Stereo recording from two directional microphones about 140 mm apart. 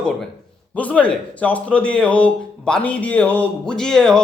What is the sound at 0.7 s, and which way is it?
A man's voice, 10° left (ahead or behind).